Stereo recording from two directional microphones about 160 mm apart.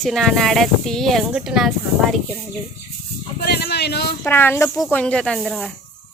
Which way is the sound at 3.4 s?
85° left.